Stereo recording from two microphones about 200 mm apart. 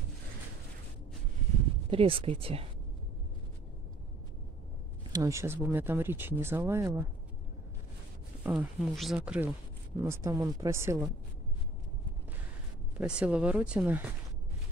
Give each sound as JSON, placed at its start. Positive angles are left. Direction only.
{"t": 1.9, "sound": "speech", "side_deg": -25}
{"t": 5.1, "sound": "speech", "side_deg": -15}
{"t": 8.5, "sound": "speech", "side_deg": -5}
{"t": 12.9, "sound": "speech", "side_deg": -5}